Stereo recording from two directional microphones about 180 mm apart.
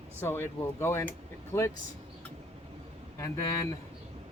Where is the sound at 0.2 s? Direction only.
15° left (ahead or behind).